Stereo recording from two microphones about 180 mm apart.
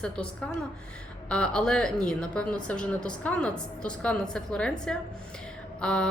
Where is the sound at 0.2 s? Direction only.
5° left (ahead or behind).